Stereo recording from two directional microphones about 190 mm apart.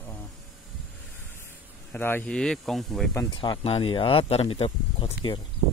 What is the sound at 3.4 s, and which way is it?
Speech, 30° left (ahead or behind).